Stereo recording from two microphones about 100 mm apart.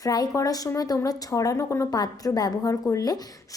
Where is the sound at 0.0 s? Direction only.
40° left (ahead or behind).